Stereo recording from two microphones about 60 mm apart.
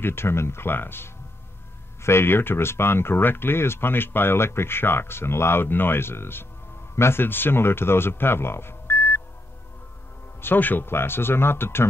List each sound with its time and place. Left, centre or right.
0.0 s speech: left
10.4 s speech: left